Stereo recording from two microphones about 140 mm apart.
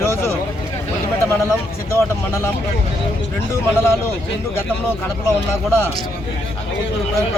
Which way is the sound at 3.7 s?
15° left (ahead or behind).